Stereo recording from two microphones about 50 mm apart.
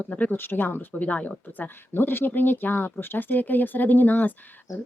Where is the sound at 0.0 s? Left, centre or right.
Left.